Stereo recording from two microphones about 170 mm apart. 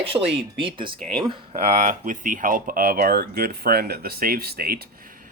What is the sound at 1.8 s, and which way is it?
Speech, 50° right (ahead or behind).